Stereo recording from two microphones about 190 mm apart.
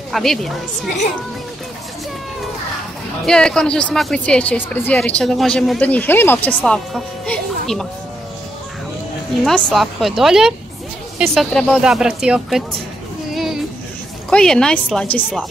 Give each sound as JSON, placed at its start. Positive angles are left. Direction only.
{"t": 0.1, "sound": "speech", "side_deg": 0}
{"t": 3.3, "sound": "speech", "side_deg": 5}
{"t": 9.4, "sound": "speech", "side_deg": 0}
{"t": 13.3, "sound": "a sound", "side_deg": 0}
{"t": 14.3, "sound": "speech", "side_deg": 5}